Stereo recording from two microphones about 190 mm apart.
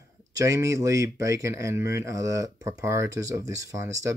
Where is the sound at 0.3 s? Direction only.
15° right (ahead or behind).